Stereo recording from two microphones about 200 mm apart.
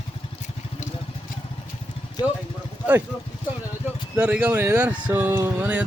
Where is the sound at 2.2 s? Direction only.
20° left (ahead or behind).